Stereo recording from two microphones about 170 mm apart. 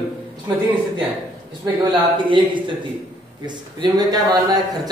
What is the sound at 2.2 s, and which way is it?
A man's voice, 30° right (ahead or behind).